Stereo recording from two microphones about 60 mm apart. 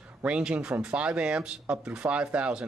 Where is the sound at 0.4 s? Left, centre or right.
Centre.